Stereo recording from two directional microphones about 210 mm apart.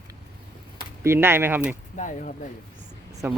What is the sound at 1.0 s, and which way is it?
Speech, 10° right (ahead or behind).